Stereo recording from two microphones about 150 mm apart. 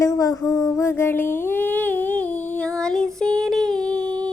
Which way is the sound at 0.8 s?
15° left (ahead or behind).